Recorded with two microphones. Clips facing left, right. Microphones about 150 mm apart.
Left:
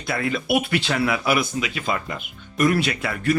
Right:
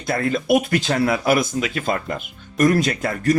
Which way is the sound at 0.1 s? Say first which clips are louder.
Right 4 dB; 45° right (ahead or behind).